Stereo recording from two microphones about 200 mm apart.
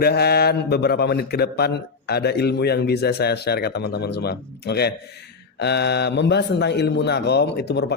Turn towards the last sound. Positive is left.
turn(degrees=55)  # may be behind; listen again after turning